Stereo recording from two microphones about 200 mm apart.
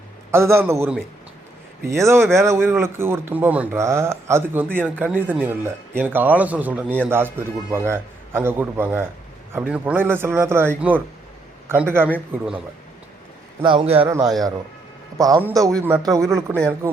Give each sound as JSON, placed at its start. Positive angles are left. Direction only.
{"t": 0.3, "sound": "speech", "side_deg": -15}
{"t": 13.6, "sound": "a man's voice", "side_deg": -25}
{"t": 15.2, "sound": "speech", "side_deg": -15}